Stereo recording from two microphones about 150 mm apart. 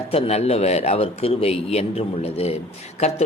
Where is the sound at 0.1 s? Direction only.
45° left (ahead or behind).